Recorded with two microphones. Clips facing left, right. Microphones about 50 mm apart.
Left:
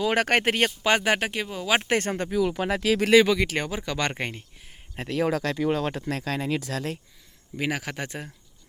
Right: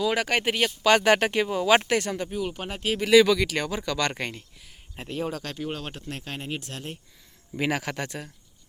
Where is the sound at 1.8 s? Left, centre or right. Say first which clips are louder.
Left 1 dB; left.